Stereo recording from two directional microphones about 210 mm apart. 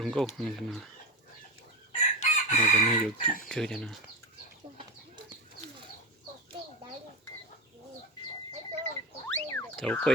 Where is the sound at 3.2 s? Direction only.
40° left (ahead or behind).